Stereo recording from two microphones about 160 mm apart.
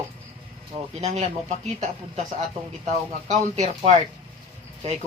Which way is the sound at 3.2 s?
45° right (ahead or behind).